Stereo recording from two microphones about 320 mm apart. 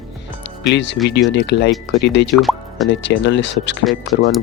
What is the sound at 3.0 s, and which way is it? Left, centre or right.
Speech, left.